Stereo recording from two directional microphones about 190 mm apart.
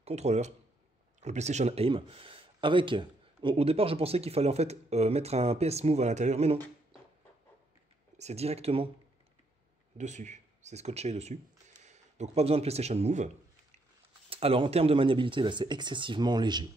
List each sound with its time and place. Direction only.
0.0 s speech: 35° right (ahead or behind)
8.2 s speech: 35° right (ahead or behind)
9.9 s speech: 40° right (ahead or behind)
14.3 s speech: 30° right (ahead or behind)